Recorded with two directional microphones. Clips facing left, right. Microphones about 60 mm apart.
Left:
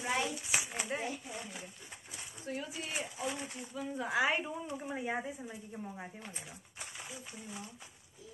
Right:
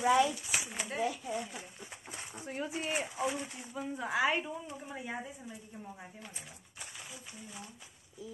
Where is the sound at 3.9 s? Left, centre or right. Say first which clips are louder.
Right 1 dB; centre.